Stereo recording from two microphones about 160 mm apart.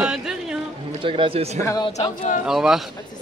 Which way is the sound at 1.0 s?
35° right (ahead or behind).